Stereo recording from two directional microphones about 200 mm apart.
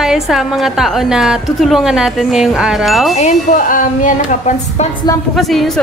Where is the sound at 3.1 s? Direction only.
35° left (ahead or behind).